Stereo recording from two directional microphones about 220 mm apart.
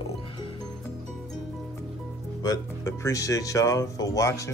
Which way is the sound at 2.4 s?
15° left (ahead or behind).